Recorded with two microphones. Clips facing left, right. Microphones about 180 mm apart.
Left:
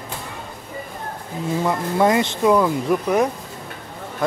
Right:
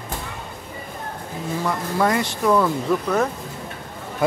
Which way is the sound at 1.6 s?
20° left (ahead or behind).